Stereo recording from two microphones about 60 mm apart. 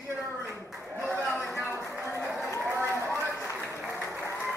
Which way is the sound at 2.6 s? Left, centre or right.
Right.